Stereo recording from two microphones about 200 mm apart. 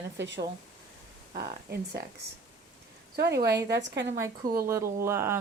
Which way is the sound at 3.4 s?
55° right (ahead or behind).